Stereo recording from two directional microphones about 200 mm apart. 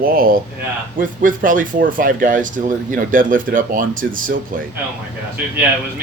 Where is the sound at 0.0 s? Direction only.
45° right (ahead or behind).